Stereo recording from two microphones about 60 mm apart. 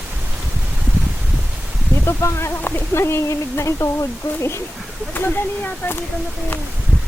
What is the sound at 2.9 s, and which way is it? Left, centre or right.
Speech, left.